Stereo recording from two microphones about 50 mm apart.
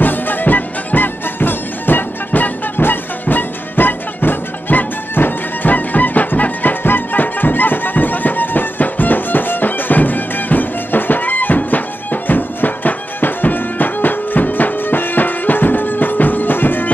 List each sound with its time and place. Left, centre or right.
0.0 s music: left